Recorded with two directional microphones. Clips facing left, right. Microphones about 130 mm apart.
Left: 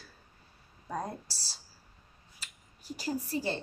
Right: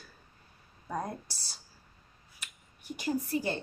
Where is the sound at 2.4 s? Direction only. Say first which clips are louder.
Right 1 dB; 30° left (ahead or behind).